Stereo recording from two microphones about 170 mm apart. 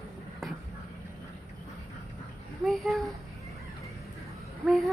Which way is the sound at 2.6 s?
Centre (ahead or behind).